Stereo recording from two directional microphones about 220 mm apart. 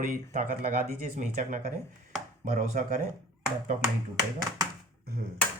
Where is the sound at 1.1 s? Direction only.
35° right (ahead or behind).